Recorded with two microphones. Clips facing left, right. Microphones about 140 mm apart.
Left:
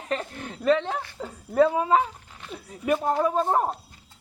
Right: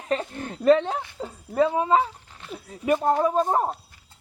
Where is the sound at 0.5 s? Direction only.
35° right (ahead or behind).